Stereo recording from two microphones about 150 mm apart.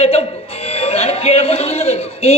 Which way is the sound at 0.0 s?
40° left (ahead or behind).